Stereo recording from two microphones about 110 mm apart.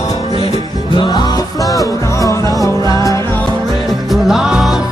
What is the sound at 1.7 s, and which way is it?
Music, 30° left (ahead or behind).